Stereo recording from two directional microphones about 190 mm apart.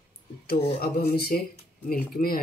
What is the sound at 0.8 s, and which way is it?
Speech, 55° left (ahead or behind).